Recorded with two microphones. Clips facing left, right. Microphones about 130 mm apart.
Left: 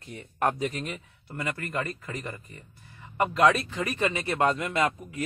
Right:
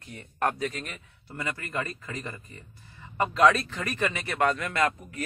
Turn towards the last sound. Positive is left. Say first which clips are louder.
# even
turn(degrees=20)  # may be behind; listen again after turning